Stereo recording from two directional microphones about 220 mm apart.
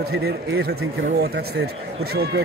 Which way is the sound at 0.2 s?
45° right (ahead or behind).